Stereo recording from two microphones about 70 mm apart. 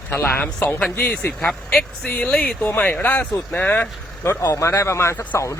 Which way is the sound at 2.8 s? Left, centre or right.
Left.